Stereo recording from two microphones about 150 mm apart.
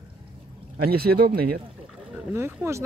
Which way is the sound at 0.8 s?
90° right.